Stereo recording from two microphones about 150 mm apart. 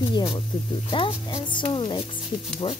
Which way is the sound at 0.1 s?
30° left (ahead or behind).